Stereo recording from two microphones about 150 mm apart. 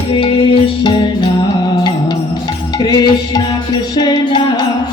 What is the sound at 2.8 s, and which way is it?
Music, 25° left (ahead or behind).